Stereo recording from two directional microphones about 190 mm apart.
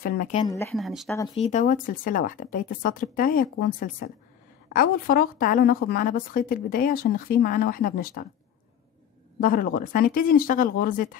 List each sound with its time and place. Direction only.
0.0 s a woman's voice: 50° left (ahead or behind)
0.5 s speech: 15° left (ahead or behind)
0.7 s speech: centre (ahead or behind)
1.3 s a woman's voice: 35° left (ahead or behind)
9.4 s a woman's voice: 50° left (ahead or behind)